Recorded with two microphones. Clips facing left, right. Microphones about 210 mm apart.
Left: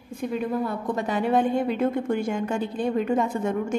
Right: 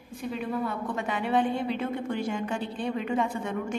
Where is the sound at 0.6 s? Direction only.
40° left (ahead or behind).